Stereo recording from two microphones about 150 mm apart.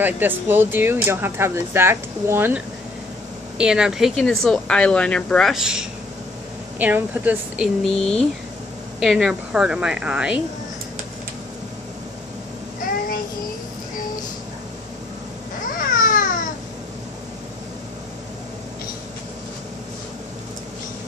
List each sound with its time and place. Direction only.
0.0 s speech: 15° right (ahead or behind)
15.8 s babbling: 65° left (ahead or behind)